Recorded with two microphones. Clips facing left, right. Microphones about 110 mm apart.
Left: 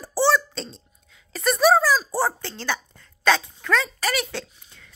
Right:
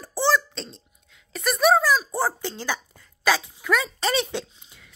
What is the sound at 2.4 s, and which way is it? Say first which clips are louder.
Speech: even; 15° right (ahead or behind).